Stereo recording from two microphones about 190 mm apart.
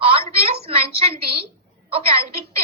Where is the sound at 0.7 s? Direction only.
30° right (ahead or behind).